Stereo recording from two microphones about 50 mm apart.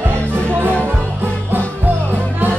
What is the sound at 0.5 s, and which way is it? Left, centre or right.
Music, right.